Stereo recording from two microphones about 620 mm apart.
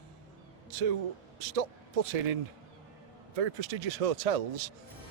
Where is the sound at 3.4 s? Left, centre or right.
Right.